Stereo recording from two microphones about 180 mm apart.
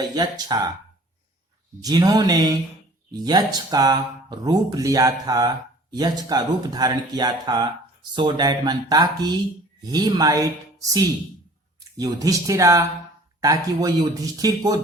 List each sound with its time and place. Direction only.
0.0 s speech: 20° right (ahead or behind)
1.8 s speech: 20° right (ahead or behind)